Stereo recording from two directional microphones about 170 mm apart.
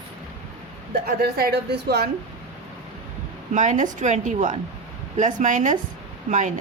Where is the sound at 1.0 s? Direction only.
65° right (ahead or behind).